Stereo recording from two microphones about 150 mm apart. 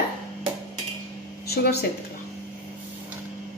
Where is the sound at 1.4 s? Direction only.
90° left.